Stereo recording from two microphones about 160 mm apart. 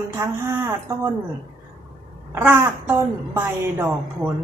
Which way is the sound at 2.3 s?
15° right (ahead or behind).